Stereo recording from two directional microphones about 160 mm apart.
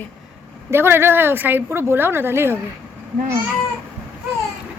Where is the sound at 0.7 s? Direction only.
15° right (ahead or behind).